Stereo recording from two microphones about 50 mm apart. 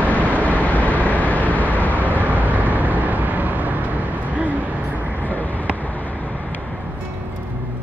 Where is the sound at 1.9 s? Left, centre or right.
Right.